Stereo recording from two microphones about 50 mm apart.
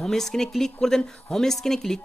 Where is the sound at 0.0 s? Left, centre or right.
Centre.